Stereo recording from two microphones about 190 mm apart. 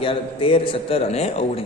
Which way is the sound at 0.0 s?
30° left (ahead or behind).